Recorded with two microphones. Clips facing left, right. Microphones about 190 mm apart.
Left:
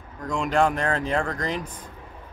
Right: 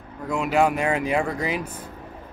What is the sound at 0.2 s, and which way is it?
Speech, 5° right (ahead or behind).